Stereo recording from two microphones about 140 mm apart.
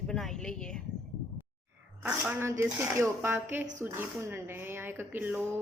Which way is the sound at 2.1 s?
15° right (ahead or behind).